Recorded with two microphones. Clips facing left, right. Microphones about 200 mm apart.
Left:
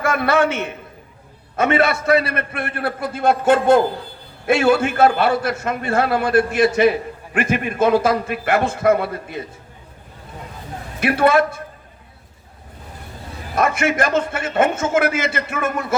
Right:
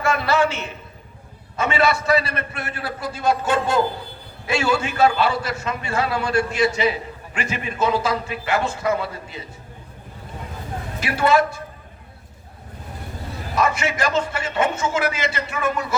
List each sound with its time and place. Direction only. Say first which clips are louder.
0.0 s a man's voice: left 2 dB; 55° left (ahead or behind)
11.0 s a man's voice: left 3 dB; 55° left (ahead or behind)
13.6 s a man's voice: left 3 dB; 55° left (ahead or behind)